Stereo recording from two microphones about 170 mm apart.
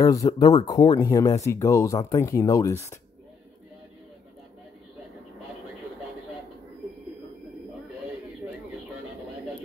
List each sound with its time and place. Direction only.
0.0 s speech: 20° left (ahead or behind)